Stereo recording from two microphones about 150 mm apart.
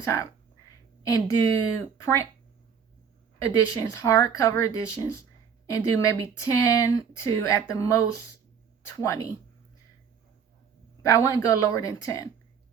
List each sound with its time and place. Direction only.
0.0 s speech: 20° left (ahead or behind)
3.3 s speech: 20° left (ahead or behind)
11.0 s speech: 20° left (ahead or behind)